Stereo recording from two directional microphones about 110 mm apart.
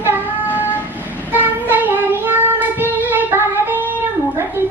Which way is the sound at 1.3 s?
15° right (ahead or behind).